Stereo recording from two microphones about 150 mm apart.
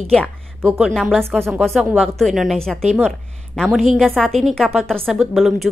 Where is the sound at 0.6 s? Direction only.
10° right (ahead or behind).